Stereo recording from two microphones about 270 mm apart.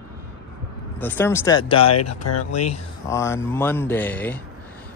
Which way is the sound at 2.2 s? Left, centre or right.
Left.